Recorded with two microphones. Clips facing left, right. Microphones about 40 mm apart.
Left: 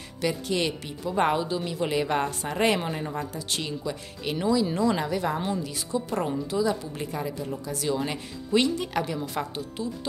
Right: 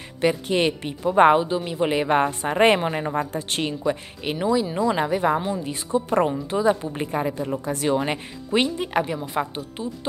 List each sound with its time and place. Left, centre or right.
0.2 s a woman's voice: right; by 5.0 s centre
5.0 s a woman's voice: right